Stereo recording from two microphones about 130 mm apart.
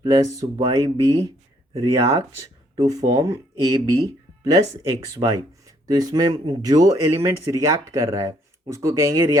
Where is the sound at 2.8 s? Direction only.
30° right (ahead or behind).